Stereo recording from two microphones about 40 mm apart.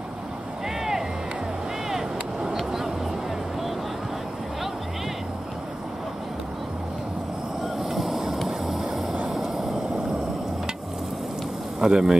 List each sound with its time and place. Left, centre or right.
1.9 s a sound: centre
7.8 s vehicle: centre
11.8 s speech: centre